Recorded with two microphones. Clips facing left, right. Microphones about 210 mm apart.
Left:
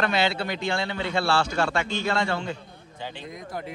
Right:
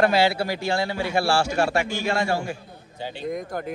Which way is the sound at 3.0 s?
50° right (ahead or behind).